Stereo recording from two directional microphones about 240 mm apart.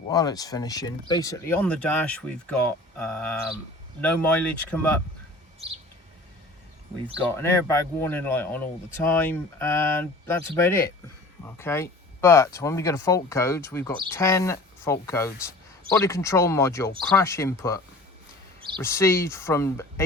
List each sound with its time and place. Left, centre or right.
0.1 s speech: centre
7.3 s speech: centre